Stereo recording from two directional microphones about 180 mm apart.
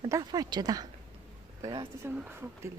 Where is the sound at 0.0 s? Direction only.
25° right (ahead or behind).